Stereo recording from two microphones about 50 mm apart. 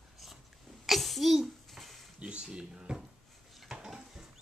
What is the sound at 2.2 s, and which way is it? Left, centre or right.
Speech, right.